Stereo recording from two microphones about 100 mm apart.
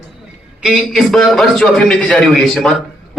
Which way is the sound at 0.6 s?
Centre (ahead or behind).